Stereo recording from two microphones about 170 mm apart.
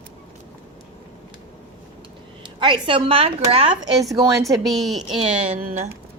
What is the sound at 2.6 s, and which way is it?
Speech, 30° right (ahead or behind).